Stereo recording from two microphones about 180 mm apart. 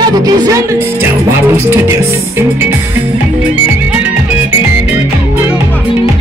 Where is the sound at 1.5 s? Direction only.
15° right (ahead or behind).